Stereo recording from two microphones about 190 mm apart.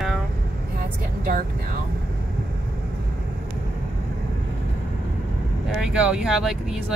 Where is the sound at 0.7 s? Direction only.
50° right (ahead or behind).